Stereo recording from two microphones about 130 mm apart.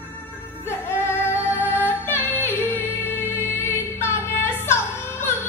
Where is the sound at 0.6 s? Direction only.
20° left (ahead or behind).